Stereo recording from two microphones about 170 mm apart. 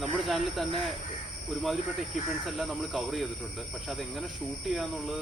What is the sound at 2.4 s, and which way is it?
Speech, centre (ahead or behind).